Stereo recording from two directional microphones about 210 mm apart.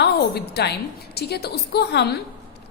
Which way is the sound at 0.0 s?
50° left (ahead or behind).